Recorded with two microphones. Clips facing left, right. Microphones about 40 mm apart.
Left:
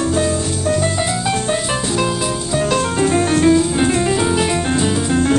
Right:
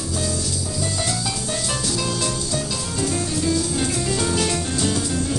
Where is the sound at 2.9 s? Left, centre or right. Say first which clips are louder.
Left 7 dB; left.